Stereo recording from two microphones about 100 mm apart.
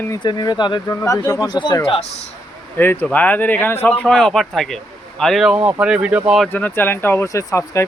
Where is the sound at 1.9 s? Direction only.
90° left.